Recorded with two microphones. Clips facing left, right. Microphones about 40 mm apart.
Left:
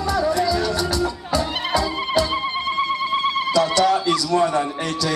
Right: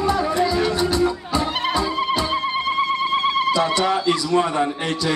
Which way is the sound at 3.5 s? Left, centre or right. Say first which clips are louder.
Left 2 dB; right.